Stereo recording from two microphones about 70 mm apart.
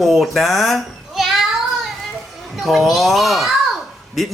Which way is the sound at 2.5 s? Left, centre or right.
Centre.